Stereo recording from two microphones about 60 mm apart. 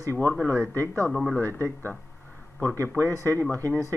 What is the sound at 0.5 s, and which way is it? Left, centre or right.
Speech, right.